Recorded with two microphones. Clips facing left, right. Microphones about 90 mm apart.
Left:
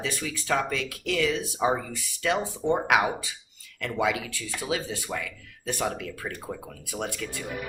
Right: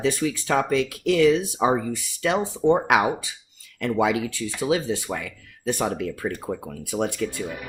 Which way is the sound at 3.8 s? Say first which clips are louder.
Right 5 dB; 30° right (ahead or behind).